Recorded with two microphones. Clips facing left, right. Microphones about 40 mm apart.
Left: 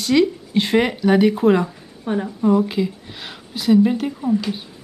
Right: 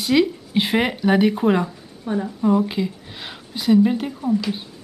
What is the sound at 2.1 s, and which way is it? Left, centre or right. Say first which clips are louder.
Speech: left 2 dB; left.